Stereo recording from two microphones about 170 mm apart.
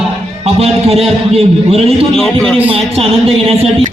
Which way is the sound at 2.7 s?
35° right (ahead or behind).